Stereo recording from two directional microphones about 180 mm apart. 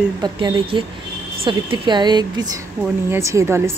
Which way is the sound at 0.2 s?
25° right (ahead or behind).